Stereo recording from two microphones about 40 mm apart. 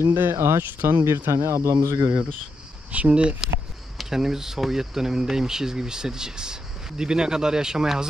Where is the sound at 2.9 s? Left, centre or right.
Right.